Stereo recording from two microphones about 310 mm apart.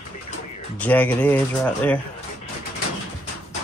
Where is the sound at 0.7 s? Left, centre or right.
Centre.